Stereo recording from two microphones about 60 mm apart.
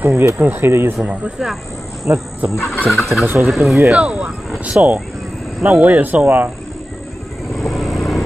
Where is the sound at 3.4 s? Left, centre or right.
Centre.